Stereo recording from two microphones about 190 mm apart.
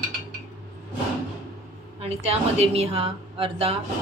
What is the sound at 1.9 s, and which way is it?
A woman's voice, 35° right (ahead or behind).